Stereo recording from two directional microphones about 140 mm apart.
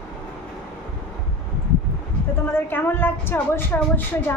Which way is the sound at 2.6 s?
15° left (ahead or behind).